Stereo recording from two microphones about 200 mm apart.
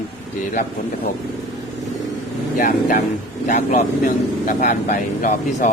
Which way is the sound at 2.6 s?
40° left (ahead or behind).